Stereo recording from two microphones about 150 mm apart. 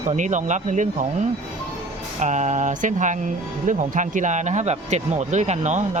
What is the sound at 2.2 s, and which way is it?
Speech, 50° right (ahead or behind).